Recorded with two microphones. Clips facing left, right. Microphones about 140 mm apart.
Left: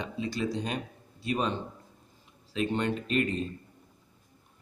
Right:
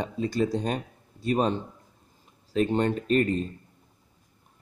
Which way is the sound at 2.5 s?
40° right (ahead or behind).